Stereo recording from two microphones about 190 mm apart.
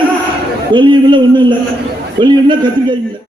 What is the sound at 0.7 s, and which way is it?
A man's voice, 25° right (ahead or behind).